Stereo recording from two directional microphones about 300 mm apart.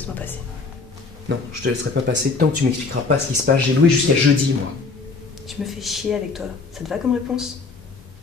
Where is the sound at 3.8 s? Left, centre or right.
Right.